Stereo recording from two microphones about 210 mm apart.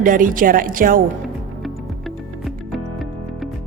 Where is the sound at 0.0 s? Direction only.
40° right (ahead or behind).